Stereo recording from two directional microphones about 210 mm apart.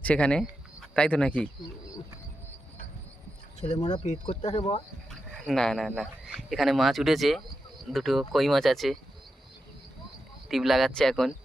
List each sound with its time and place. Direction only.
0.0 s speech: 5° left (ahead or behind)
3.8 s speech: 20° left (ahead or behind)
4.0 s speech: 35° left (ahead or behind)
5.3 s speech: centre (ahead or behind)
10.5 s speech: centre (ahead or behind)